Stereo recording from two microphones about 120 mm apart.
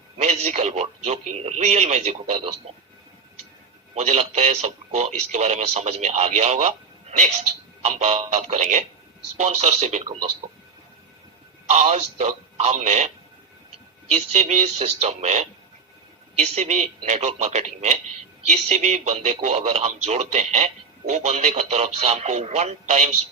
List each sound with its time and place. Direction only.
0.2 s a man's voice: 75° right (ahead or behind)
3.9 s a man's voice: 70° right (ahead or behind)
7.8 s a man's voice: 65° right (ahead or behind)
11.7 s a man's voice: 70° right (ahead or behind)
14.1 s a man's voice: 75° right (ahead or behind)
16.4 s speech: 85° right
17.1 s a man's voice: 75° right (ahead or behind)
18.9 s a man's voice: 65° right (ahead or behind)